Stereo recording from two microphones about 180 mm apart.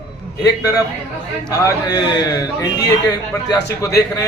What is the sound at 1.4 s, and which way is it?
Speech, 20° left (ahead or behind).